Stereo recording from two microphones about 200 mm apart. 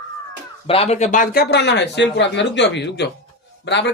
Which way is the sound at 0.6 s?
30° left (ahead or behind).